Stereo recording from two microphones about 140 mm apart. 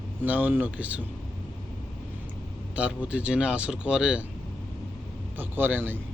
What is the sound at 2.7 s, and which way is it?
A man's voice, 10° right (ahead or behind).